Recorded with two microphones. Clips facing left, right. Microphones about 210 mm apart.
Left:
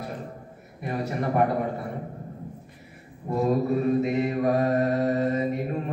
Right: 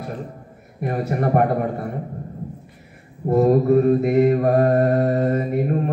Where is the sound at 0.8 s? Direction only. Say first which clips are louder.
Right 6 dB; 50° right (ahead or behind).